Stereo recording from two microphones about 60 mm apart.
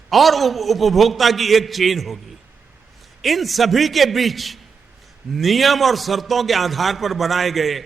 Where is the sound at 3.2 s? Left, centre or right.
Centre.